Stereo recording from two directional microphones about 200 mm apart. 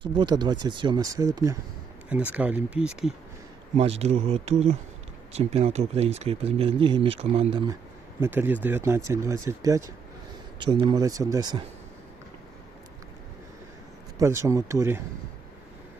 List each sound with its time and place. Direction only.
0.0 s speech: 20° right (ahead or behind); by 3.2 s 5° right (ahead or behind)
3.8 s speech: 30° right (ahead or behind)
8.2 s speech: 10° right (ahead or behind)
14.2 s speech: 15° right (ahead or behind)